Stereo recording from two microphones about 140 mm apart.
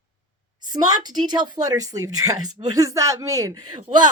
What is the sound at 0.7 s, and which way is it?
A woman's voice, 30° right (ahead or behind).